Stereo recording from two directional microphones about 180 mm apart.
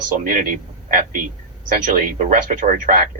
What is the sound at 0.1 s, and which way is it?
Speech, 50° right (ahead or behind).